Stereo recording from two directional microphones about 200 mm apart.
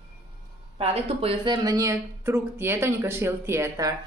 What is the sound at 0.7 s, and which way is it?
Speech, 30° right (ahead or behind).